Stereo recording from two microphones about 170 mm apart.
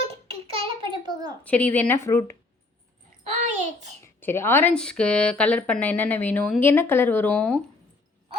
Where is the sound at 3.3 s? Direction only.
45° right (ahead or behind).